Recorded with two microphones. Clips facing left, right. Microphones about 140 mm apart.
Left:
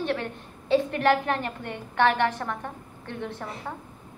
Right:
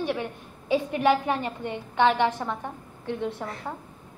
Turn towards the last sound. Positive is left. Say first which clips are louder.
# right 4 dB
turn(degrees=-15)  # may be behind; listen again after turning